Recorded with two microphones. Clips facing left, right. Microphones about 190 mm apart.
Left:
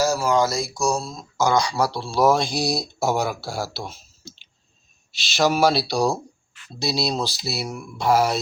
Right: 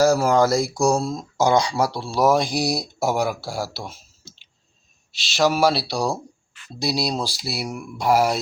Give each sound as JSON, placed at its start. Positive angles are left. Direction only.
{"t": 0.0, "sound": "a sound", "side_deg": -55}
{"t": 1.4, "sound": "speech", "side_deg": -30}
{"t": 1.8, "sound": "speech", "side_deg": -15}
{"t": 5.4, "sound": "speech", "side_deg": -5}